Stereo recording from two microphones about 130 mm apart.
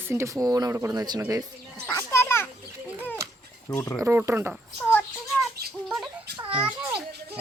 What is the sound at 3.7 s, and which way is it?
Speech, 20° left (ahead or behind).